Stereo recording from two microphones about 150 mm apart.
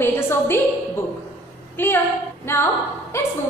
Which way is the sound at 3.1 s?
15° left (ahead or behind).